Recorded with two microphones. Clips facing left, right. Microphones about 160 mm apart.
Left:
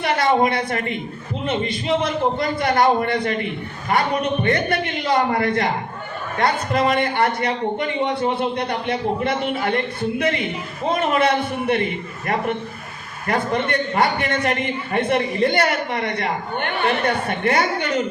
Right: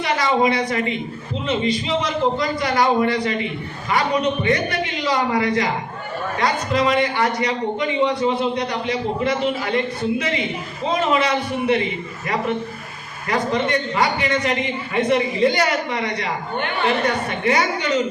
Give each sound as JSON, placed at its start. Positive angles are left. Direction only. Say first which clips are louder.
{"t": 0.0, "sound": "a man's voice", "louder": "left 1 dB", "side_deg": 55}
{"t": 13.2, "sound": "a man's voice", "louder": "right 1 dB", "side_deg": 55}